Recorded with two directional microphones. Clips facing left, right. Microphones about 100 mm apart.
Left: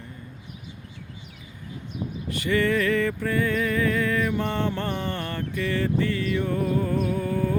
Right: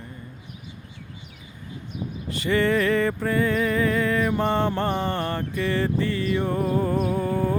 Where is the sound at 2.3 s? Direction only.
30° right (ahead or behind).